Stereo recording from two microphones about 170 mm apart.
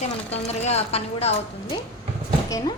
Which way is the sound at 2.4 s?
20° left (ahead or behind).